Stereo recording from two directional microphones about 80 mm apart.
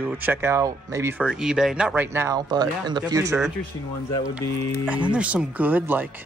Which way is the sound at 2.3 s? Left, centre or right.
Right.